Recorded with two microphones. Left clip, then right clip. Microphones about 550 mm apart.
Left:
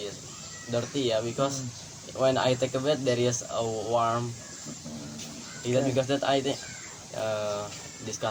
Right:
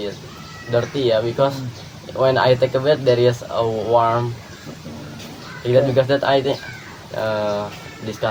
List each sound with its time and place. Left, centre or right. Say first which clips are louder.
0.7 s speech: right 10 dB; left
5.7 s speech: right 11 dB; left